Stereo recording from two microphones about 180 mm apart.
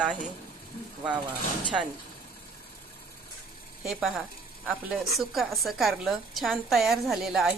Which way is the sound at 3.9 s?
5° right (ahead or behind).